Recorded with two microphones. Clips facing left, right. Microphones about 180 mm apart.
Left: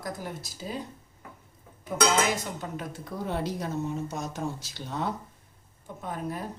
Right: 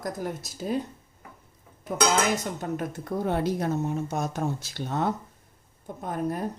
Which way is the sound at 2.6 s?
55° right (ahead or behind).